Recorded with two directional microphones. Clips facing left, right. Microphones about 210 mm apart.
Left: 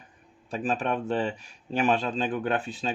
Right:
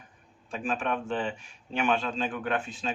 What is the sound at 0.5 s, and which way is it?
Speech, 35° left (ahead or behind).